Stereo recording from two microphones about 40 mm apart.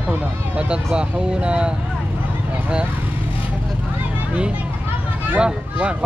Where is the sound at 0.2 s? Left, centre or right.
Right.